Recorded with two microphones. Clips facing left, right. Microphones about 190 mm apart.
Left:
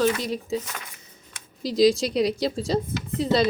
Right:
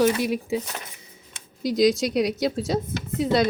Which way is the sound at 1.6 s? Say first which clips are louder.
Left 1 dB; centre (ahead or behind).